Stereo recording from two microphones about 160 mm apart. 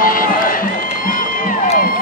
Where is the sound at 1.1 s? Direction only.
60° left (ahead or behind).